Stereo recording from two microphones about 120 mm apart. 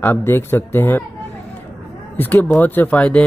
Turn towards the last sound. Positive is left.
turn(degrees=10)  # may be behind; listen again after turning